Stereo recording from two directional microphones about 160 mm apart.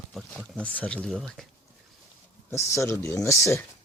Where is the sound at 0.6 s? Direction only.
10° left (ahead or behind).